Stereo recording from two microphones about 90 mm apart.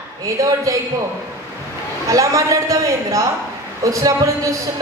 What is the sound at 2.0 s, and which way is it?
Speech, 40° right (ahead or behind).